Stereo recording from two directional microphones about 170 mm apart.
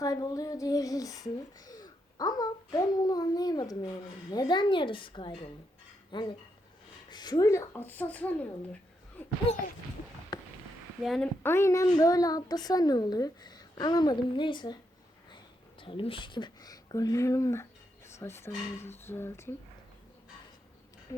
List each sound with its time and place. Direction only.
0.0 s speech: 20° left (ahead or behind)
10.3 s a sound: 25° left (ahead or behind)
11.0 s a woman's voice: centre (ahead or behind)
11.4 s a child's voice: 15° left (ahead or behind)
15.8 s speech: 30° left (ahead or behind); by 19.5 s 15° left (ahead or behind)
21.1 s a sound: 20° left (ahead or behind)